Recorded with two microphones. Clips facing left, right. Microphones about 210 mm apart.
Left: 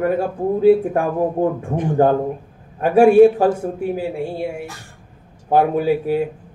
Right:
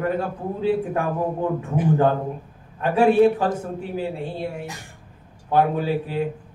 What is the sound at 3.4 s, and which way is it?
Speech, 10° left (ahead or behind).